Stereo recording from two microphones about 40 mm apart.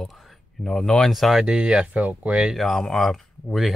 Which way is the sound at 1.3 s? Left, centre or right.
Right.